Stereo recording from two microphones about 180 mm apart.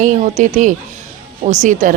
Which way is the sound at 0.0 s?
45° right (ahead or behind).